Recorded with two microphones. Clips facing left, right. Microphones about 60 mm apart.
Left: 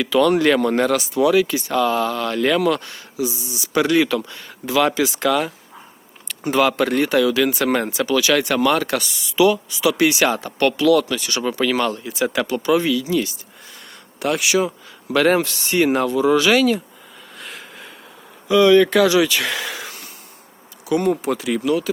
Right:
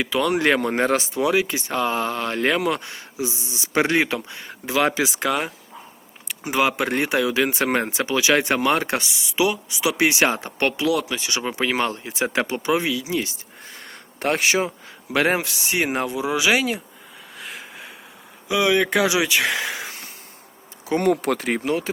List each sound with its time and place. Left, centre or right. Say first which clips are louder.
0.0 s speech: left 5 dB; centre
6.2 s speech: left 4 dB; centre
13.7 s a sound: even; right
15.1 s speech: left 4 dB; centre
17.3 s a sound: even; centre
18.4 s speech: left 7 dB; centre
21.0 s speech: even; right